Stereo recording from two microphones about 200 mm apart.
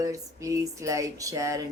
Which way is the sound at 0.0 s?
15° right (ahead or behind).